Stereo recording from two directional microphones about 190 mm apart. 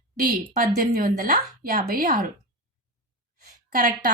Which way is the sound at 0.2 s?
50° right (ahead or behind).